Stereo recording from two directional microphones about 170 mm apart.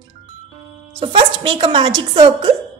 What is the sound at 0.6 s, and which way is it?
A woman's voice, 30° right (ahead or behind).